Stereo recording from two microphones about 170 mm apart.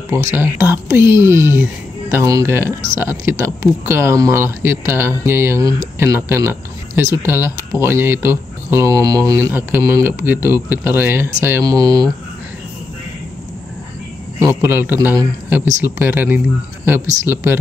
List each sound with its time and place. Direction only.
0.1 s speech: 15° right (ahead or behind)
14.4 s speech: 10° right (ahead or behind)